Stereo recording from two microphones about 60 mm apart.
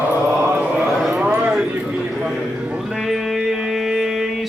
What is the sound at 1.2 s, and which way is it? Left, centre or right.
Speech, right.